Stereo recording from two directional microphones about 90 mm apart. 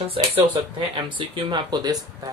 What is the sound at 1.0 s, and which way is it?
Speech, 65° right (ahead or behind).